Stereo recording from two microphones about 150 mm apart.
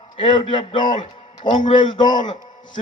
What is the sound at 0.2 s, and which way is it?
A man's voice, 35° left (ahead or behind).